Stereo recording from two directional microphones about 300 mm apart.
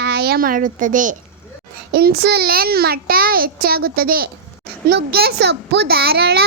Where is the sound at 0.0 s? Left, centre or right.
Right.